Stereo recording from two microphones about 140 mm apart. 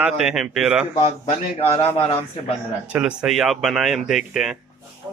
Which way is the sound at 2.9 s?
5° right (ahead or behind).